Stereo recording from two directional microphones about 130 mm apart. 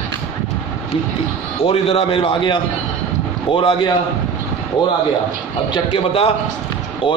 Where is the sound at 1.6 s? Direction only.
50° left (ahead or behind).